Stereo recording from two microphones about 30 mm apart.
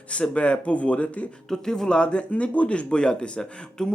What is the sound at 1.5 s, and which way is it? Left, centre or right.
Speech, centre.